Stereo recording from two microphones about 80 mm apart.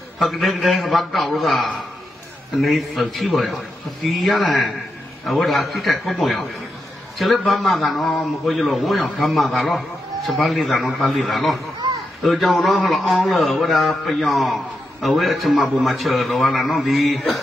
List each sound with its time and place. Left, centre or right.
0.2 s a man's voice: centre
11.8 s a sound: right
12.2 s a man's voice: centre